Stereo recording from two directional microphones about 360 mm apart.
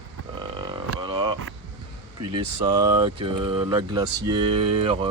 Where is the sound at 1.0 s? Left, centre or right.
Centre.